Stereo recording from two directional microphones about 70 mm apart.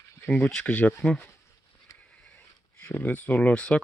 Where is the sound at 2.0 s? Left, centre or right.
Centre.